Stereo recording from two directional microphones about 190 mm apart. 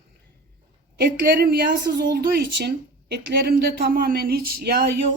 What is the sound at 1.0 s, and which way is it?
A woman's voice, 55° right (ahead or behind).